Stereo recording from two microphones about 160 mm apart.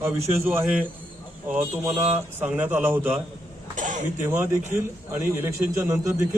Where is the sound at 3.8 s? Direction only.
50° right (ahead or behind).